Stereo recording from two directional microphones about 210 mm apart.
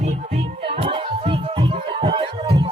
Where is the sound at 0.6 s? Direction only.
25° right (ahead or behind).